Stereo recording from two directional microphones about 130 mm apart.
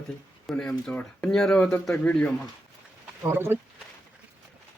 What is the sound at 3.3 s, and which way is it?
Speech, 15° right (ahead or behind).